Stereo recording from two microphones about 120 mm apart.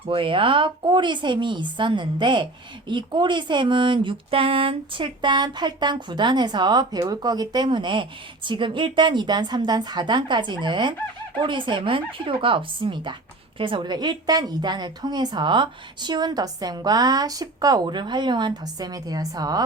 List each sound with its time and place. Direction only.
0.1 s speech: 45° right (ahead or behind)